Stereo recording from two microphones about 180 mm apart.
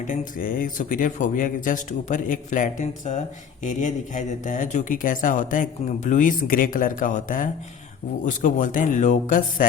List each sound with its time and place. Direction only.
0.1 s speech: 50° left (ahead or behind)